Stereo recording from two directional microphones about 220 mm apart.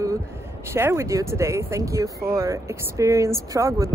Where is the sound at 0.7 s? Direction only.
10° right (ahead or behind).